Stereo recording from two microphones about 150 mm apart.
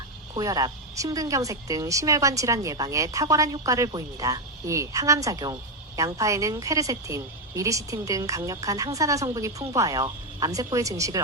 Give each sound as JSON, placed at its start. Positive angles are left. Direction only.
{"t": 0.3, "sound": "a woman's voice", "side_deg": -25}